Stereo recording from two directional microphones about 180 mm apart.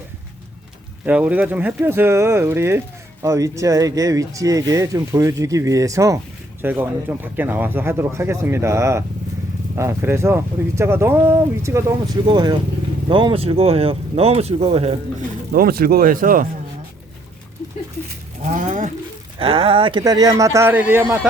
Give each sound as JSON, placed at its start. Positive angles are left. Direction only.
{"t": 1.0, "sound": "speech", "side_deg": -10}
{"t": 15.5, "sound": "speech", "side_deg": -55}
{"t": 18.5, "sound": "speech", "side_deg": -45}
{"t": 19.4, "sound": "speech", "side_deg": -30}